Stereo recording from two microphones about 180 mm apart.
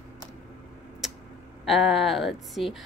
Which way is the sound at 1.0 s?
Centre (ahead or behind).